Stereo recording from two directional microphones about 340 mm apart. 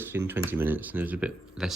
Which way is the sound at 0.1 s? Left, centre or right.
Centre.